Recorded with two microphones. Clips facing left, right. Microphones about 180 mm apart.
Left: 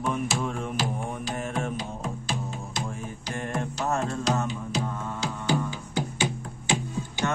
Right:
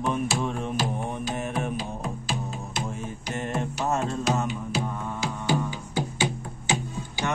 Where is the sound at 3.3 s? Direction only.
20° right (ahead or behind).